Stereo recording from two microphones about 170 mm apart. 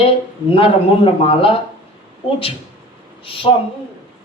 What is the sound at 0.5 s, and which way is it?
A man's voice, 30° left (ahead or behind).